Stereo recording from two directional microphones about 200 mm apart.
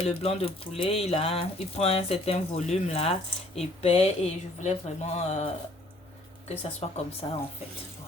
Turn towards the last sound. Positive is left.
turn(degrees=25)  # may be behind; listen again after turning